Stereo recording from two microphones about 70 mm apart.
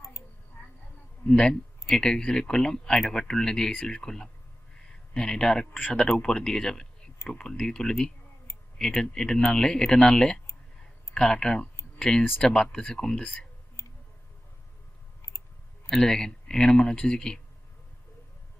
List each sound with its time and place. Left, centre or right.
1.3 s speech: centre
13.0 s speech: centre
13.2 s speech: centre
13.8 s a sound: left
15.2 s clicking: left
15.9 s speech: centre